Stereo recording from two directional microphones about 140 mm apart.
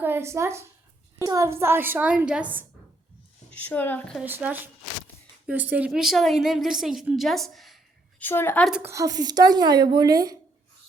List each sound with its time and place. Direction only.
0.0 s a woman's voice: 15° right (ahead or behind)
3.5 s a woman's voice: 10° left (ahead or behind)
4.2 s a woman's voice: 10° right (ahead or behind)
8.2 s a woman's voice: 15° left (ahead or behind)
8.8 s a woman's voice: 20° right (ahead or behind)